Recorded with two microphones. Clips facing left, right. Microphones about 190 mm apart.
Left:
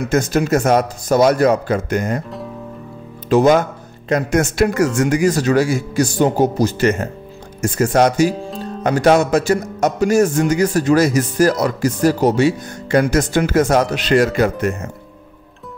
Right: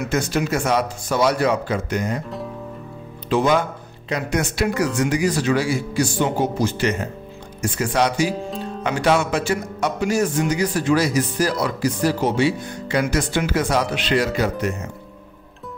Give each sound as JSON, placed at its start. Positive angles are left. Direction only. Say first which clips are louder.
{"t": 0.1, "sound": "speech", "louder": "left 7 dB", "side_deg": 45}
{"t": 3.3, "sound": "speech", "louder": "left 6 dB", "side_deg": 45}
{"t": 8.4, "sound": "speech", "louder": "left 1 dB", "side_deg": 0}
{"t": 8.8, "sound": "speech", "louder": "left 6 dB", "side_deg": 40}